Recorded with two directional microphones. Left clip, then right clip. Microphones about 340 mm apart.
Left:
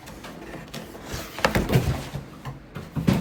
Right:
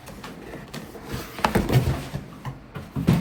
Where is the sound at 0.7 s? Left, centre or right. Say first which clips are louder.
Right 1 dB; centre.